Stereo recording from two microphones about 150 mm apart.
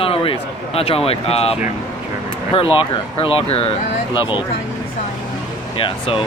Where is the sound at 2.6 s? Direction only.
35° left (ahead or behind).